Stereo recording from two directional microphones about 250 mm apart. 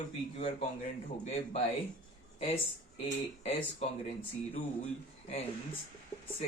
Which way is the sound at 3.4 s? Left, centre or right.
Left.